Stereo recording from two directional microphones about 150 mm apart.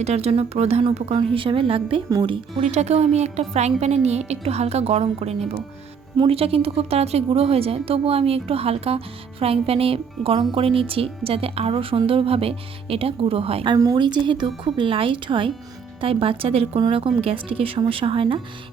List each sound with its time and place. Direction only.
0.0 s a woman's voice: 45° right (ahead or behind)
2.7 s a woman's voice: 45° right (ahead or behind)
13.7 s a woman's voice: 25° right (ahead or behind)